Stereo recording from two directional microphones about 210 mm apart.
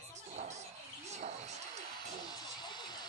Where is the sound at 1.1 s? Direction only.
30° right (ahead or behind).